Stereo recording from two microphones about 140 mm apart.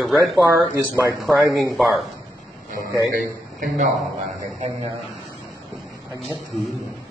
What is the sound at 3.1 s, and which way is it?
Speech, 90° right.